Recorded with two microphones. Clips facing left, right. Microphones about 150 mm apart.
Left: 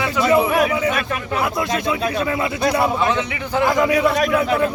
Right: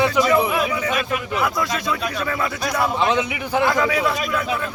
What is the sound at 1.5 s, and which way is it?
Speech, 25° left (ahead or behind).